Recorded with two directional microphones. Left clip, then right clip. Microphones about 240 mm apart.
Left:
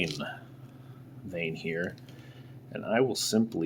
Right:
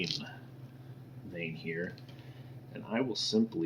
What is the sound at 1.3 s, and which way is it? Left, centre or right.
Speech, left.